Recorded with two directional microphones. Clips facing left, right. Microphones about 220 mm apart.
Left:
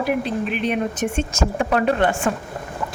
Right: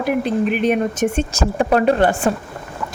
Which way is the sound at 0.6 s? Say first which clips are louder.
Right 5 dB; 45° right (ahead or behind).